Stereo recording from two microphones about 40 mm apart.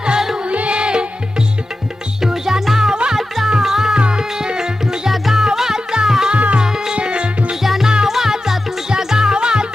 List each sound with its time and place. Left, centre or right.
0.0 s music: right
0.5 s music: right
2.2 s music: centre
3.9 s music: right
5.1 s music: centre
6.3 s music: right
6.6 s music: centre
7.5 s music: centre